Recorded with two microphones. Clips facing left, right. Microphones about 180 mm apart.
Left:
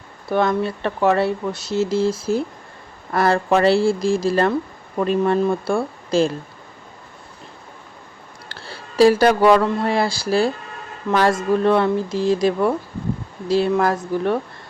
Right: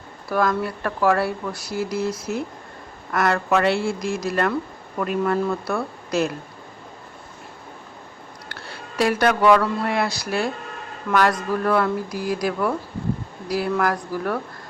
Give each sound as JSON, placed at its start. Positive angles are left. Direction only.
{"t": 0.3, "sound": "speech", "side_deg": 25}
{"t": 8.4, "sound": "speech", "side_deg": 30}